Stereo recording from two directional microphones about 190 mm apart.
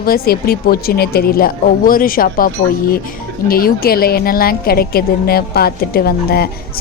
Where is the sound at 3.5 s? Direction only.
50° left (ahead or behind).